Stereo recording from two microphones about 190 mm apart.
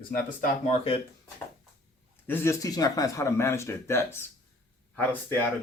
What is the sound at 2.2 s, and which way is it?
Speech, 10° left (ahead or behind).